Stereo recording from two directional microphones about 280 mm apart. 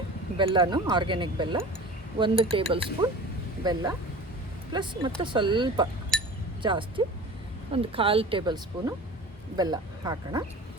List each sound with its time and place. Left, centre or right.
0.3 s speech: centre
6.1 s chink: centre
6.6 s speech: centre